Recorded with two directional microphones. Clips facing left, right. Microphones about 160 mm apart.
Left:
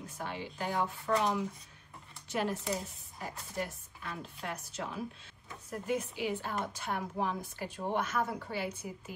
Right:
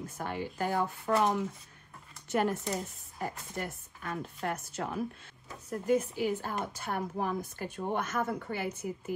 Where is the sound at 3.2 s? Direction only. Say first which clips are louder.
Right 2 dB; 50° right (ahead or behind).